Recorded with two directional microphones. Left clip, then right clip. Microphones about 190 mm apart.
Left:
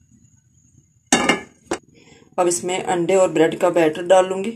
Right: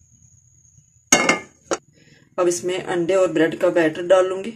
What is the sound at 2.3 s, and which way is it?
Speech, 10° left (ahead or behind).